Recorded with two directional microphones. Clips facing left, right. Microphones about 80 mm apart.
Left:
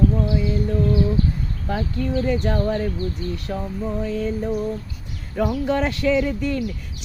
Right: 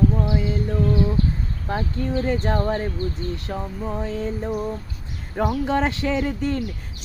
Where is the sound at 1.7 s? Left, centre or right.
Right.